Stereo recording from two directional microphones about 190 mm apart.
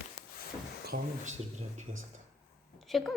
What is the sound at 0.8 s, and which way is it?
Speech, 45° right (ahead or behind).